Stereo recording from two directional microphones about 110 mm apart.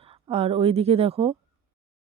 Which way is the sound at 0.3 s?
65° right (ahead or behind).